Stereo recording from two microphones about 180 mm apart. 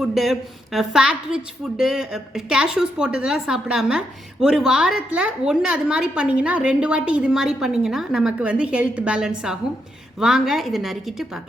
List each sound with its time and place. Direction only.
0.0 s a woman's voice: centre (ahead or behind)